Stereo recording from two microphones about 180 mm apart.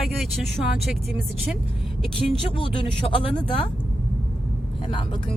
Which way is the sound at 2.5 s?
30° left (ahead or behind).